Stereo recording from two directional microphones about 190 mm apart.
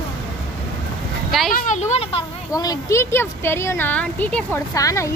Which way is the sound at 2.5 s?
20° left (ahead or behind).